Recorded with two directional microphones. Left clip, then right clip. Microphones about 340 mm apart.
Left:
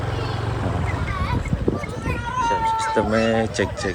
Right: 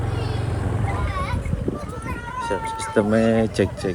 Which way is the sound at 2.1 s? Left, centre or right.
Left.